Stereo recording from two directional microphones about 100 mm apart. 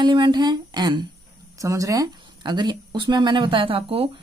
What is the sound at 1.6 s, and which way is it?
Speech, 35° right (ahead or behind).